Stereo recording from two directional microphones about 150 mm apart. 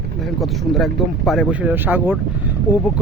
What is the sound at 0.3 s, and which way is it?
Speech, centre (ahead or behind).